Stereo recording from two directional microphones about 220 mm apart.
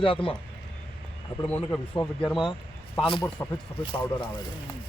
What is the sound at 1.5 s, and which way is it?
Speech, 5° left (ahead or behind).